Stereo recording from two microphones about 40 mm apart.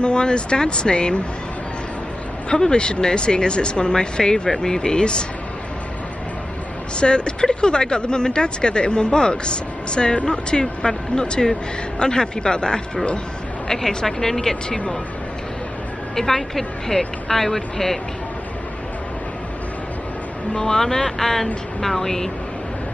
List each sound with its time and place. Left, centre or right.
0.0 s speech: left
2.5 s speech: left
7.0 s speech: left
13.7 s speech: centre
16.2 s speech: centre
20.5 s speech: centre